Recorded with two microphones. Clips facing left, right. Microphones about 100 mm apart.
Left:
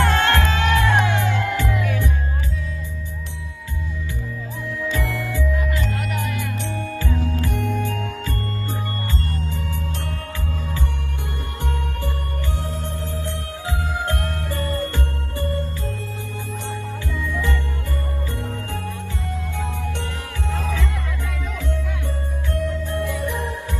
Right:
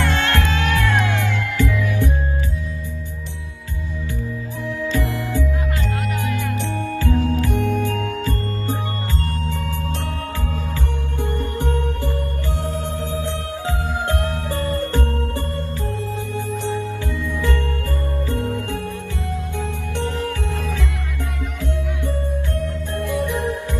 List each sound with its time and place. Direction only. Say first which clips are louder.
0.0 s music: left 2 dB; 30° left (ahead or behind)
5.1 s music: right 2 dB; 35° right (ahead or behind)
7.0 s music: right 7 dB; 75° right (ahead or behind)
7.5 s music: right 4 dB; 40° right (ahead or behind)
13.7 s music: right 1 dB; 25° right (ahead or behind)
14.5 s music: right 3 dB; 40° right (ahead or behind)
20.5 s music: even; 60° left (ahead or behind)